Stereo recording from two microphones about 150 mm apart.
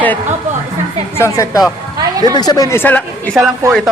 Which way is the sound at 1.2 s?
20° left (ahead or behind).